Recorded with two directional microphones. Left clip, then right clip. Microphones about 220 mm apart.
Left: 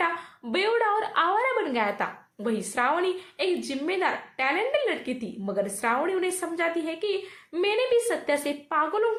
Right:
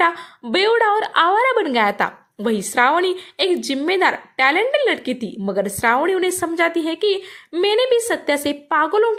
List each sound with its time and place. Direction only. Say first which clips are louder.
0.5 s a woman's voice: right 8 dB; 40° right (ahead or behind)